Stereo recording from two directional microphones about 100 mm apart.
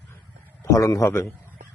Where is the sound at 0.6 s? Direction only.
35° left (ahead or behind).